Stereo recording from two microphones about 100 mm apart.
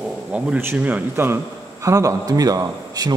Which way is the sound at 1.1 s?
25° right (ahead or behind).